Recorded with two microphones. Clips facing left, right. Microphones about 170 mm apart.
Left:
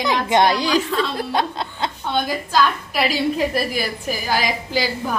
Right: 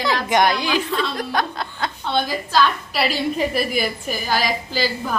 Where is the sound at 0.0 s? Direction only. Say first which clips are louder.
Left 1 dB; 20° left (ahead or behind).